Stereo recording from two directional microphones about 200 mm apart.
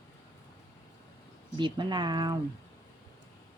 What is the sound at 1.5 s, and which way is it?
Speech, 25° right (ahead or behind).